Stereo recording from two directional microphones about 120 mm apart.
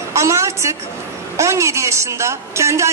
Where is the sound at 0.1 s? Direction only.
25° right (ahead or behind).